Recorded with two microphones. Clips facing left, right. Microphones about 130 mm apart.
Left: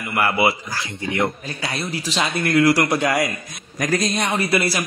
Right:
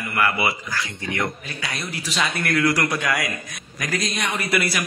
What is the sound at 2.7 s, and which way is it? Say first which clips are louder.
Speech: left 5 dB; 40° left (ahead or behind).